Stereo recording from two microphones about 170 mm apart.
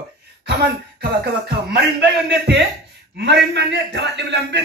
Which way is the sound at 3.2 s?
85° right.